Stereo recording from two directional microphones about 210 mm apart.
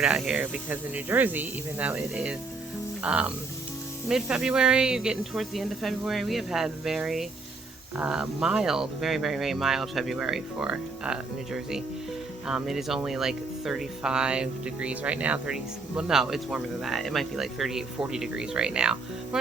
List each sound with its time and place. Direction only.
0.0 s speech: 5° right (ahead or behind)